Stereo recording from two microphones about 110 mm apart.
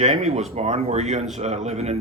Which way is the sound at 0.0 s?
85° right.